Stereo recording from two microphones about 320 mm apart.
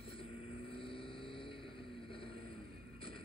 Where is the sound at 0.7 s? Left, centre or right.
Centre.